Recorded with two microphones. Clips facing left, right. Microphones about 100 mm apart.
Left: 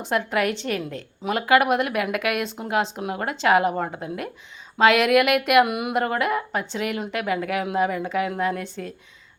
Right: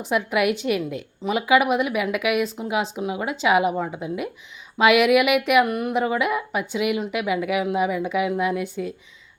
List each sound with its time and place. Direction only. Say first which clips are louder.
0.0 s a woman's voice: right 2 dB; 5° right (ahead or behind)
3.9 s speech: right 2 dB; 45° left (ahead or behind)
4.8 s a woman's voice: right 1 dB; 10° right (ahead or behind)